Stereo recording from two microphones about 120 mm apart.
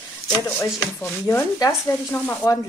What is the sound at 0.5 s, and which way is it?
Speech, 20° left (ahead or behind).